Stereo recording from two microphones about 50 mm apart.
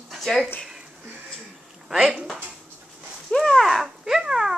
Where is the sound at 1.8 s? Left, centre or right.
Centre.